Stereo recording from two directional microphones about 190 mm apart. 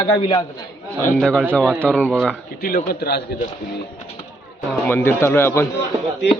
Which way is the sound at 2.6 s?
50° left (ahead or behind).